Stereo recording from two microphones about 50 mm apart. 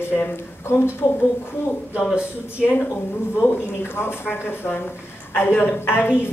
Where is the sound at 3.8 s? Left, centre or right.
Left.